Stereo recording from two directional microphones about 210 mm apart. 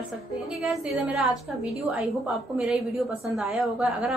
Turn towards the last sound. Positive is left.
turn(degrees=0)  # may be behind; listen again after turning